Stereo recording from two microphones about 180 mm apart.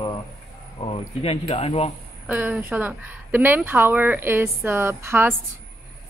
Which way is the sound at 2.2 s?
10° right (ahead or behind).